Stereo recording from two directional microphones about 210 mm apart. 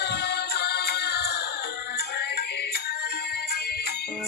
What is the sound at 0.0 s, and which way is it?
Music, 50° left (ahead or behind).